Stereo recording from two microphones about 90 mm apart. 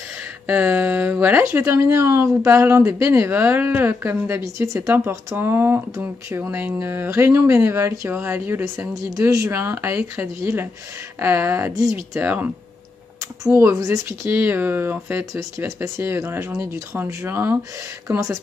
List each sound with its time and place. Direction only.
0.5 s a woman's voice: 20° right (ahead or behind)
8.9 s a woman's voice: 35° right (ahead or behind); by 12.4 s 20° right (ahead or behind)
13.4 s a woman's voice: 35° right (ahead or behind)